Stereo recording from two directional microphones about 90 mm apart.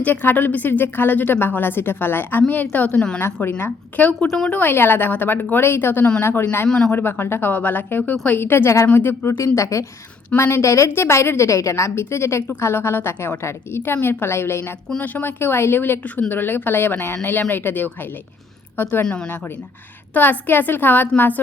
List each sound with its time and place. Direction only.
0.0 s a woman's voice: 20° left (ahead or behind)
4.3 s a woman's voice: 5° left (ahead or behind)
4.5 s a woman's voice: 25° left (ahead or behind)
6.7 s a woman's voice: 10° left (ahead or behind)
6.9 s a woman's voice: 25° left (ahead or behind)
8.4 s a woman's voice: 30° left (ahead or behind)
9.6 s a woman's voice: 35° left (ahead or behind)
14.8 s a woman's voice: 15° left (ahead or behind)
20.1 s a woman's voice: 20° left (ahead or behind)